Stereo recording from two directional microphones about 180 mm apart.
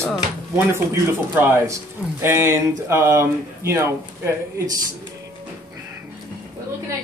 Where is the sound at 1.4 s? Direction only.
10° right (ahead or behind).